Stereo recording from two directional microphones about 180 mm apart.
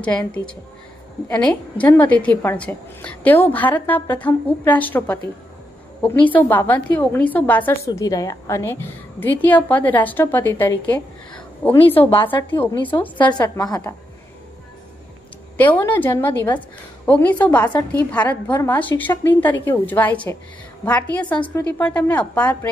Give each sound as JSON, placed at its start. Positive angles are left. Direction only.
{"t": 0.0, "sound": "a woman's voice", "side_deg": 5}
{"t": 12.1, "sound": "a woman's voice", "side_deg": 30}
{"t": 15.5, "sound": "a woman's voice", "side_deg": 10}